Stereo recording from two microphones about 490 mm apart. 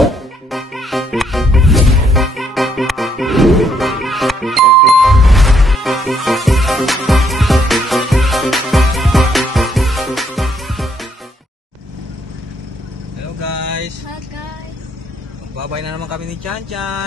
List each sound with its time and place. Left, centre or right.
0.0 s music: centre
16.7 s vehicle: right